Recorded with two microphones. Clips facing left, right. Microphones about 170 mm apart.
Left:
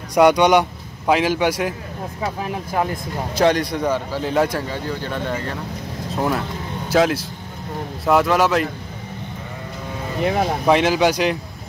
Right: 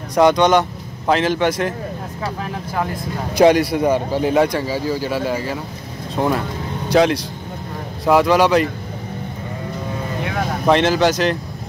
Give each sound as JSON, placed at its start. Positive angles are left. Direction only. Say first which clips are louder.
{"t": 0.1, "sound": "a man's voice", "louder": "even", "side_deg": 10}
{"t": 3.3, "sound": "a man's voice", "louder": "right 5 dB", "side_deg": -10}
{"t": 4.4, "sound": "speech", "louder": "right 3 dB", "side_deg": 0}
{"t": 10.7, "sound": "speech", "louder": "right 2 dB", "side_deg": 10}